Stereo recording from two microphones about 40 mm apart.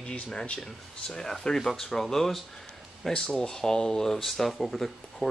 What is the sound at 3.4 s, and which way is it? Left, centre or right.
Speech, centre.